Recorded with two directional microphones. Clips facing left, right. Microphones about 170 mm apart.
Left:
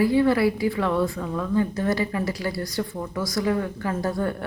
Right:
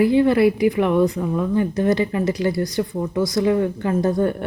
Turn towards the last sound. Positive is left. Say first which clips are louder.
# right 6 dB
turn(degrees=-20)  # may be behind; listen again after turning